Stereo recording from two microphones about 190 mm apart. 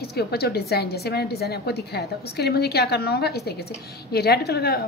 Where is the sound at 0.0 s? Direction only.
55° left (ahead or behind).